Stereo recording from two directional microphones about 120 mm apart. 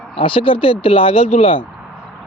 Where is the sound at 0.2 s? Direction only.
45° left (ahead or behind).